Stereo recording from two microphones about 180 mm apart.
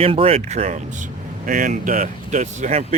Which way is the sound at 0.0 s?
30° right (ahead or behind).